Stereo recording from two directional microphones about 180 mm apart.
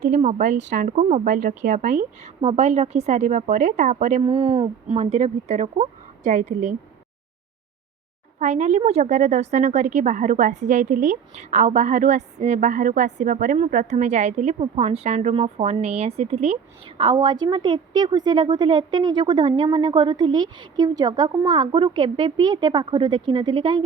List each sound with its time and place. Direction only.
0.0 s a woman's voice: 40° right (ahead or behind)
1.3 s speech: 50° right (ahead or behind)
2.4 s a woman's voice: 35° right (ahead or behind)
4.2 s a woman's voice: 30° right (ahead or behind); by 6.7 s 45° right (ahead or behind)
8.4 s a woman's voice: 40° right (ahead or behind); by 23.8 s 25° right (ahead or behind)